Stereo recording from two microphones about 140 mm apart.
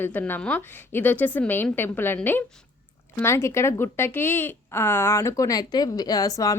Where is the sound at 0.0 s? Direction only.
15° left (ahead or behind).